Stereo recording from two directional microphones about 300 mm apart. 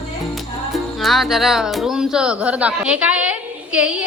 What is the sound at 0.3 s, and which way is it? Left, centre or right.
Speech, centre.